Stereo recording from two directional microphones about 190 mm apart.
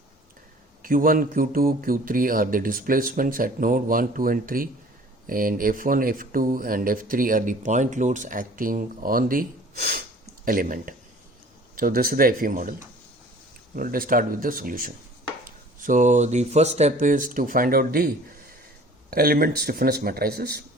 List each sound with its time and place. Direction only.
0.8 s speech: 50° right (ahead or behind)
13.7 s speech: 50° right (ahead or behind)